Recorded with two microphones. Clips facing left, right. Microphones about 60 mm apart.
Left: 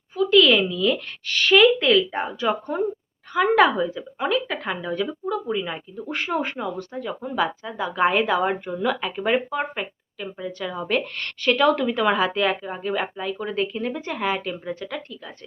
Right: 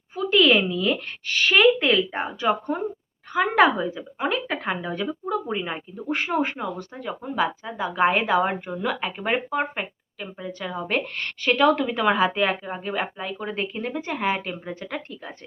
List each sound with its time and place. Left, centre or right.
0.2 s a woman's voice: centre
6.0 s a woman's voice: centre
14.8 s speech: right